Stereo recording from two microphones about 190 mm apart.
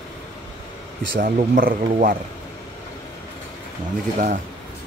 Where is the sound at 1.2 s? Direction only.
45° right (ahead or behind).